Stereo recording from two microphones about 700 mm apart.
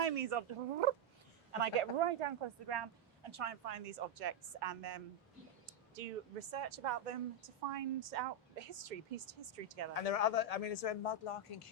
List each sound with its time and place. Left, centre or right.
0.0 s speech: right
6.5 s a woman's voice: right
9.9 s a man's voice: left